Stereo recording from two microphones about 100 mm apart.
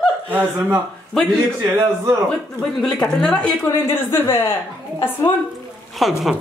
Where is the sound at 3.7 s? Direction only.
25° left (ahead or behind).